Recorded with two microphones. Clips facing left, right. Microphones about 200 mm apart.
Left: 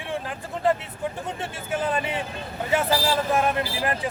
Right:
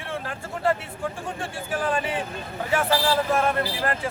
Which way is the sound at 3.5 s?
15° left (ahead or behind).